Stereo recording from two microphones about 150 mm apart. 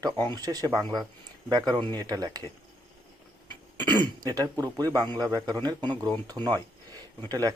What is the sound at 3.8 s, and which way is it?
A man's voice, 30° right (ahead or behind).